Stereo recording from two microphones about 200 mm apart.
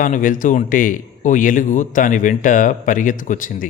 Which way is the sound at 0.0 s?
40° left (ahead or behind).